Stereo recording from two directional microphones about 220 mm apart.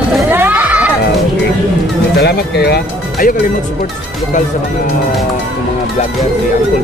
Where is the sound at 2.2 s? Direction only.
45° left (ahead or behind).